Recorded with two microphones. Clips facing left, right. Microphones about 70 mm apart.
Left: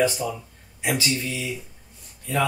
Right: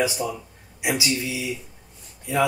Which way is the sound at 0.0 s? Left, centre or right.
Centre.